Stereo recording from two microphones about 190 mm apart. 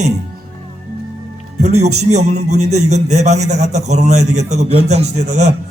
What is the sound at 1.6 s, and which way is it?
Speech, 35° right (ahead or behind).